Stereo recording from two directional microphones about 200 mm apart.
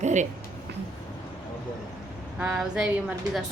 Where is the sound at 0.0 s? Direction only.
35° right (ahead or behind).